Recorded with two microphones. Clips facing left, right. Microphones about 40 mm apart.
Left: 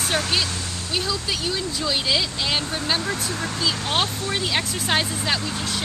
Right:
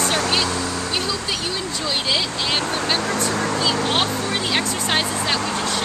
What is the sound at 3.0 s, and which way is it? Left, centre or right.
Speech, right.